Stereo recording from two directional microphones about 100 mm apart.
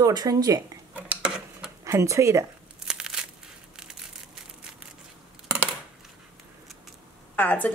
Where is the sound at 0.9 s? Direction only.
10° right (ahead or behind).